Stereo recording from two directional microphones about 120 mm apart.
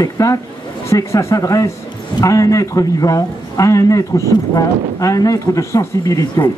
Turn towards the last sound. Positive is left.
turn(degrees=25)  # may be behind; listen again after turning